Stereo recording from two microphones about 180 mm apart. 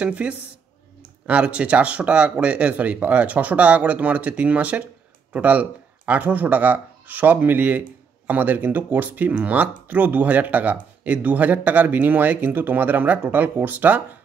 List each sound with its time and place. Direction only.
0.0 s speech: 5° right (ahead or behind)